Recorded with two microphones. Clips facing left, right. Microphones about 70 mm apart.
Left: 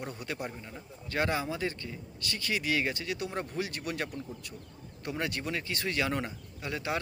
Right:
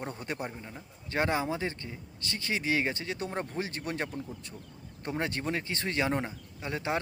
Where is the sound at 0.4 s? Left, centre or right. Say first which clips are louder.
Even; centre.